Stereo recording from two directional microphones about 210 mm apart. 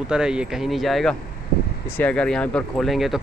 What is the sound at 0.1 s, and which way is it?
Speech, 5° right (ahead or behind).